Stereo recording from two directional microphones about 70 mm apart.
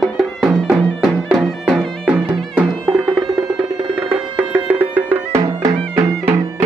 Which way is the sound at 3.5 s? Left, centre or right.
Right.